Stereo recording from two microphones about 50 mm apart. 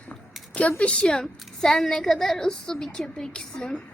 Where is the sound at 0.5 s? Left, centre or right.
Left.